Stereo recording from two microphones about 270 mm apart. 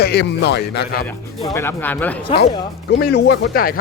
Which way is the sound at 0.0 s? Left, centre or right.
Left.